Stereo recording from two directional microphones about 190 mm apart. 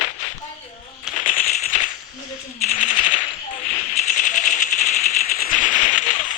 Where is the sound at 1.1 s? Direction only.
45° left (ahead or behind).